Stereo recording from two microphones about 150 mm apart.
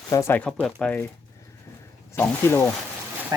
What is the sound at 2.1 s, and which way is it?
Speech, 20° left (ahead or behind).